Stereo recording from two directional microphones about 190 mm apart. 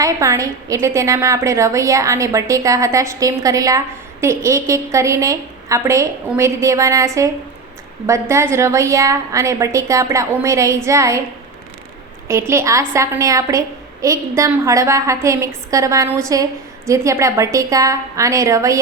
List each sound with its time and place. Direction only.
0.0 s a woman's voice: 15° right (ahead or behind)
12.3 s a woman's voice: 15° right (ahead or behind)